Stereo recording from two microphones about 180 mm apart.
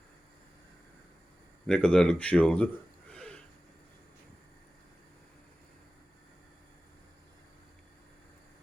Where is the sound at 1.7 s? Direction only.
5° left (ahead or behind).